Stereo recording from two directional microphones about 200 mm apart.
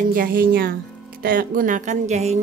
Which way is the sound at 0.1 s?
45° right (ahead or behind).